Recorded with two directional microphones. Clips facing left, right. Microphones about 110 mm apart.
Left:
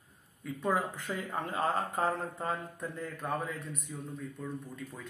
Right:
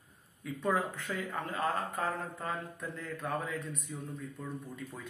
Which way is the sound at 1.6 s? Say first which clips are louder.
Left 3 dB; 35° left (ahead or behind).